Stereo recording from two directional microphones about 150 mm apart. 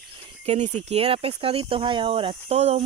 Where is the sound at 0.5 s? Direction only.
50° right (ahead or behind).